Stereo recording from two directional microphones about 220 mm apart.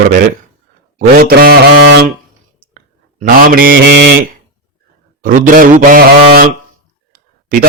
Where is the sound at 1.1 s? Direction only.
45° right (ahead or behind).